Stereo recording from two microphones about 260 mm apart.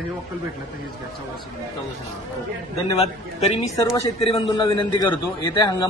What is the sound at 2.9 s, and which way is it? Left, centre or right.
A man's voice, left.